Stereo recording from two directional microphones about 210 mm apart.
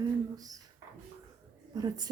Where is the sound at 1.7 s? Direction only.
20° right (ahead or behind).